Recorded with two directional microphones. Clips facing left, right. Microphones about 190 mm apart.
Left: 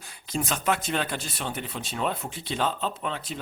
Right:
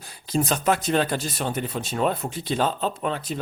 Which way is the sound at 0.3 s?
35° right (ahead or behind).